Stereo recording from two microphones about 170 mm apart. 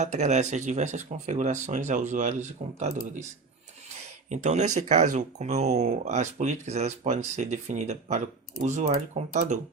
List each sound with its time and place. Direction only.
0.0 s speech: 40° right (ahead or behind)
4.3 s speech: 45° right (ahead or behind)